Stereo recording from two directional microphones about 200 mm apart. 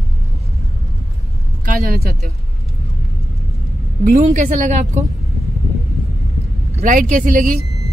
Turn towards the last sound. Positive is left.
turn(degrees=-40)  # may be behind; listen again after turning